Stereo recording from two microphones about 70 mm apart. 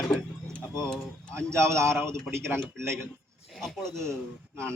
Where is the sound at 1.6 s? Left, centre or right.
Right.